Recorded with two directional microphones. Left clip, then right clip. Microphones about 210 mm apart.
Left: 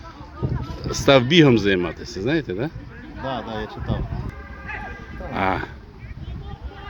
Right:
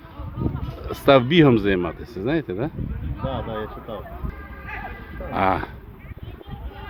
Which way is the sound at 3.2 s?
65° left (ahead or behind).